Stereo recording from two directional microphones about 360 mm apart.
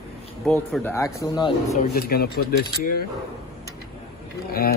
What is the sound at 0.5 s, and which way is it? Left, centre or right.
Speech, centre.